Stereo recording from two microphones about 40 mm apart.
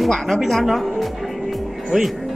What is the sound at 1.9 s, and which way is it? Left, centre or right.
Speech, centre.